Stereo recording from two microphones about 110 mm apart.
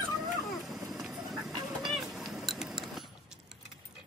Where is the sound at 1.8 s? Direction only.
Centre (ahead or behind).